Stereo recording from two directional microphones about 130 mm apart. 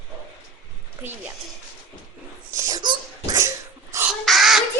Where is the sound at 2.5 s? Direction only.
30° right (ahead or behind).